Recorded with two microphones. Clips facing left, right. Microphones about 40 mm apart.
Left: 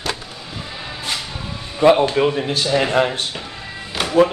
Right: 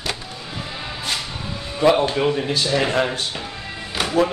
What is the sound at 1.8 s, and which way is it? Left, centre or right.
Speech, centre.